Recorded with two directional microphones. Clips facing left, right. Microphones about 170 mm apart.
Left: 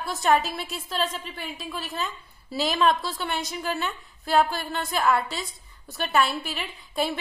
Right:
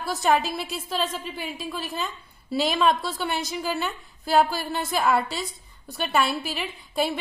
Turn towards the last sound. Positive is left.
turn(degrees=0)  # may be behind; listen again after turning